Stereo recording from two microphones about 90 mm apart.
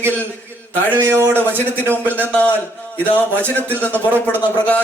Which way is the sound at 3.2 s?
20° left (ahead or behind).